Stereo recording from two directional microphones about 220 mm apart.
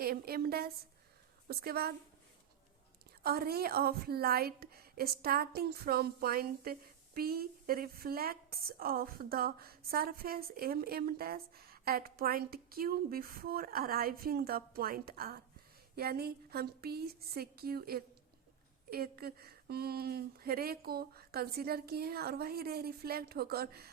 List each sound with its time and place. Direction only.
0.0 s a woman's voice: 45° right (ahead or behind)
3.2 s a woman's voice: 45° right (ahead or behind)